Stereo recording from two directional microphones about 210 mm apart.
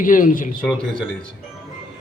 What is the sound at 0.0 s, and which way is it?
Speech, 40° left (ahead or behind).